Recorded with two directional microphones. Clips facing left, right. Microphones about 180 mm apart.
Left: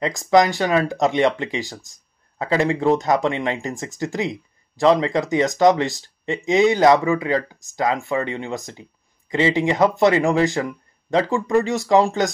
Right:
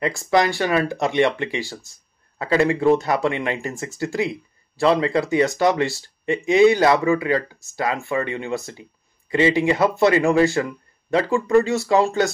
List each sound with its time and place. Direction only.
0.0 s speech: 20° left (ahead or behind)